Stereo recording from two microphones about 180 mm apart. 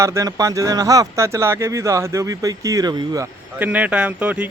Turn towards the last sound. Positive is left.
turn(degrees=-5)  # may be behind; listen again after turning